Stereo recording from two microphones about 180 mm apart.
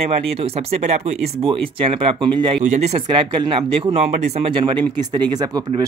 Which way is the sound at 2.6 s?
40° right (ahead or behind).